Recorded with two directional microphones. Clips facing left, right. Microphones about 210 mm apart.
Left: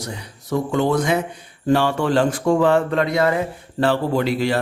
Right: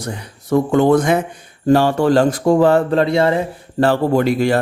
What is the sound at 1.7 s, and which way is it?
Speech, 40° right (ahead or behind).